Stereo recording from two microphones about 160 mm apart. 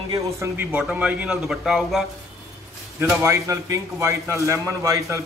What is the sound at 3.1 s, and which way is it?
A man's voice, 20° right (ahead or behind).